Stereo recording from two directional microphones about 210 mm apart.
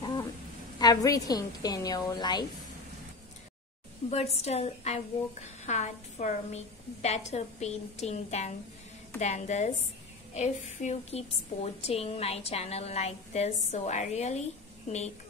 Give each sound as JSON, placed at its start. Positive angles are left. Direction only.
{"t": 0.7, "sound": "a woman's voice", "side_deg": 15}
{"t": 4.1, "sound": "a woman's voice", "side_deg": 30}